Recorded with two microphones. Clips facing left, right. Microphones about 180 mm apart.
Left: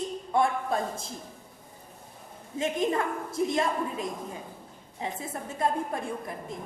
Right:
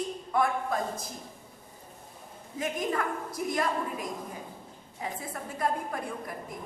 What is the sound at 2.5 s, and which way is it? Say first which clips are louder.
A woman's voice: left 4 dB; 25° left (ahead or behind).